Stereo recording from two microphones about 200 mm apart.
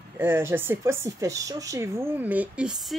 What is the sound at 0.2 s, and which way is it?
Speech, 10° right (ahead or behind).